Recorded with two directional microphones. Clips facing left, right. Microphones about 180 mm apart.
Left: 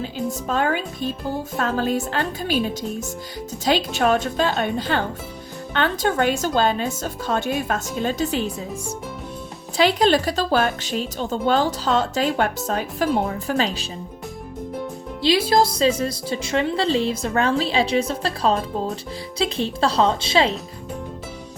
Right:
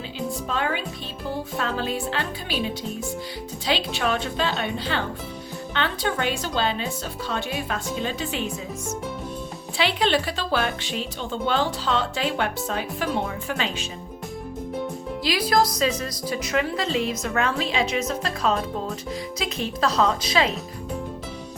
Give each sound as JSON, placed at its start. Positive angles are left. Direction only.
{"t": 0.0, "sound": "speech", "side_deg": 45}
{"t": 9.7, "sound": "speech", "side_deg": 40}
{"t": 15.2, "sound": "a woman's voice", "side_deg": 25}